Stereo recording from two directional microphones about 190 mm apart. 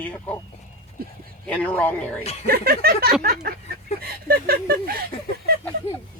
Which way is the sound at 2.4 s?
55° right (ahead or behind).